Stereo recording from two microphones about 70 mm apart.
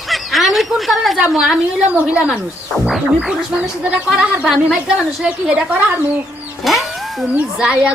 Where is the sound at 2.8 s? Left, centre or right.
Centre.